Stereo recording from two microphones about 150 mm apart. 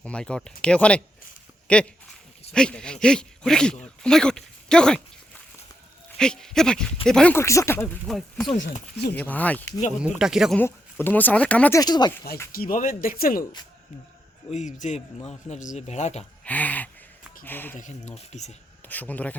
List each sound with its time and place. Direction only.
0.0 s speech: 5° left (ahead or behind)
6.1 s speech: 5° left (ahead or behind)
7.3 s speech: 20° left (ahead or behind)
8.0 s speech: centre (ahead or behind)
10.0 s speech: 5° right (ahead or behind)
10.6 s speech: 15° left (ahead or behind)
11.7 s speech: 25° left (ahead or behind)
12.5 s speech: 75° left (ahead or behind)
14.5 s speech: 55° left (ahead or behind)
16.4 s speech: 10° left (ahead or behind)
17.7 s speech: 50° left (ahead or behind)
18.9 s speech: 10° left (ahead or behind)